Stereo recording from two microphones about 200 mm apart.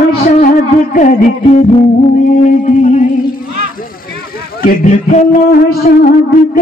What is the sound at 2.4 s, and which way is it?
Speech, 40° left (ahead or behind).